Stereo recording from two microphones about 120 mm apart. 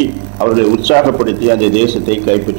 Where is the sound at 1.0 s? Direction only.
25° right (ahead or behind).